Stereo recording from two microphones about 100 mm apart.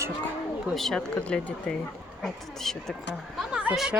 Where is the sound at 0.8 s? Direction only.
5° left (ahead or behind).